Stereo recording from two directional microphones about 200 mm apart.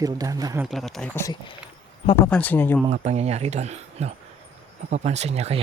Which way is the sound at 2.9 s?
35° right (ahead or behind).